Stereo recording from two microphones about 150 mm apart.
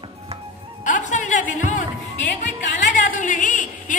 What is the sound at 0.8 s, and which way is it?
A woman's voice, 55° left (ahead or behind).